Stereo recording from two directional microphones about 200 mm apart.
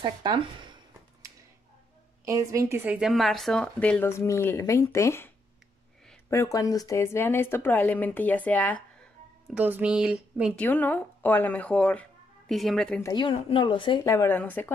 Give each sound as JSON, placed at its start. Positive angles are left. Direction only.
{"t": 0.0, "sound": "speech", "side_deg": -20}
{"t": 2.2, "sound": "a woman's voice", "side_deg": -15}
{"t": 6.3, "sound": "a woman's voice", "side_deg": 15}
{"t": 9.5, "sound": "a woman's voice", "side_deg": -5}
{"t": 10.6, "sound": "speech", "side_deg": 10}
{"t": 13.0, "sound": "speech", "side_deg": 25}